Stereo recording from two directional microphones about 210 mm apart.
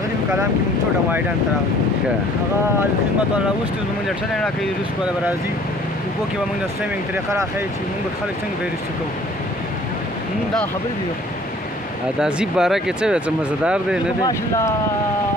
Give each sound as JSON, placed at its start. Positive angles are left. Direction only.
{"t": 12.2, "sound": "speech", "side_deg": -5}
{"t": 14.2, "sound": "speech", "side_deg": 15}